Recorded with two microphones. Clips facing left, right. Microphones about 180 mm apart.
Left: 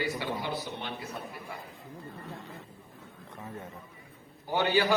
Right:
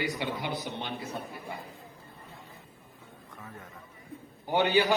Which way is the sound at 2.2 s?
80° left.